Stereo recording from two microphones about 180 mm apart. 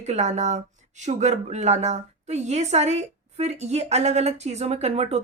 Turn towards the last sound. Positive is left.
turn(degrees=-35)  # may be behind; listen again after turning